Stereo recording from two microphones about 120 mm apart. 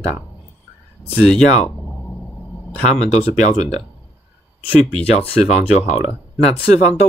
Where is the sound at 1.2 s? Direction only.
5° left (ahead or behind).